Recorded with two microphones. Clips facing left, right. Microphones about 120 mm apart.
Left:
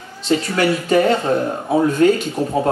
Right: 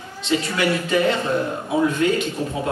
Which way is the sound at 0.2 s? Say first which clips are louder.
Left 4 dB; 40° left (ahead or behind).